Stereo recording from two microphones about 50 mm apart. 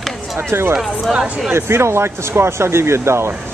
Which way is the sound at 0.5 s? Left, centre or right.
Right.